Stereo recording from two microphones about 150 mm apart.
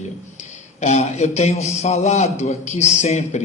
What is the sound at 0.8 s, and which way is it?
A man's voice, 50° left (ahead or behind).